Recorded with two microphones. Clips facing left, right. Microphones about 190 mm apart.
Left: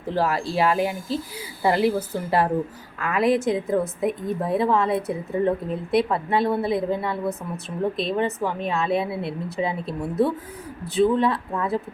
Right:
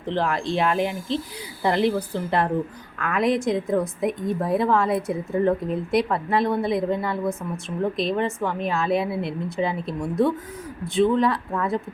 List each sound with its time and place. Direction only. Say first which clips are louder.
0.0 s a woman's voice: left 1 dB; 5° left (ahead or behind)